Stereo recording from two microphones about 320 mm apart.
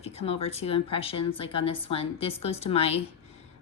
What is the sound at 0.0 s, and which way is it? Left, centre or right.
Speech, centre.